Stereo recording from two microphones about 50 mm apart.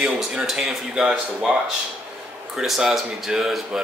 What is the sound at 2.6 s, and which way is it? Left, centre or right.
Speech, centre.